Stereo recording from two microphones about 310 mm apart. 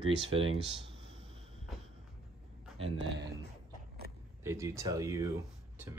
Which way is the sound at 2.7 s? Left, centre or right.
Centre.